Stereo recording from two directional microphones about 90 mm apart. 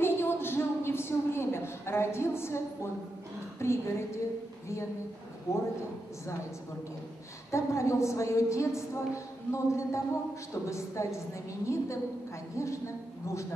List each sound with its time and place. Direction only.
0.0 s a sound: 25° left (ahead or behind)
3.5 s a woman's voice: 30° left (ahead or behind)
5.5 s a woman's voice: 35° left (ahead or behind)
7.5 s a woman's voice: 30° left (ahead or behind)